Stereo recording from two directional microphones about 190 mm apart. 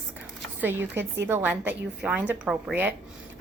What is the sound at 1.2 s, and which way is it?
A woman's voice, 10° right (ahead or behind).